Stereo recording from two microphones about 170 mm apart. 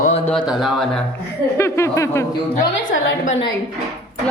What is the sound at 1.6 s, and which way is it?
Speech, 15° left (ahead or behind).